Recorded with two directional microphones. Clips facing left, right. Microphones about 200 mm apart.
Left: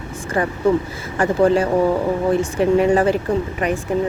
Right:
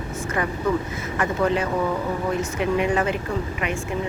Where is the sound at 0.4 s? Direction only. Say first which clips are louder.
Left 6 dB; 35° left (ahead or behind).